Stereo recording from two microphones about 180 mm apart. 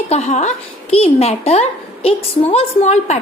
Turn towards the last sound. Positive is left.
turn(degrees=40)  # may be behind; listen again after turning